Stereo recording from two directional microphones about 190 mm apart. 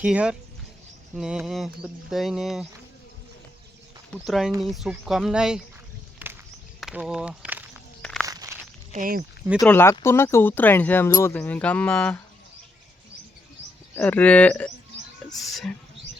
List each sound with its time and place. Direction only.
0.0 s speech: 5° right (ahead or behind)
4.1 s speech: centre (ahead or behind)
6.2 s a sound: 10° right (ahead or behind)
6.7 s speech: centre (ahead or behind)
8.0 s walk: 5° left (ahead or behind)
8.3 s walk: 20° right (ahead or behind)
8.9 s speech: 45° right (ahead or behind)
9.6 s speech: 10° left (ahead or behind)
13.9 s speech: 10° left (ahead or behind)